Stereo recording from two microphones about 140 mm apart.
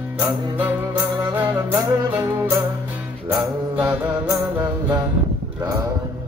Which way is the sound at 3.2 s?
20° right (ahead or behind).